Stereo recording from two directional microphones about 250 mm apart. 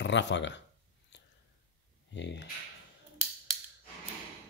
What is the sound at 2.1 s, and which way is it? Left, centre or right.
Speech, left.